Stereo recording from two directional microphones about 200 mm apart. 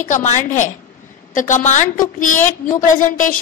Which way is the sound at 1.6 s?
35° left (ahead or behind).